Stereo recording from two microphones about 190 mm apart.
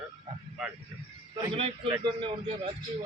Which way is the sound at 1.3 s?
25° right (ahead or behind).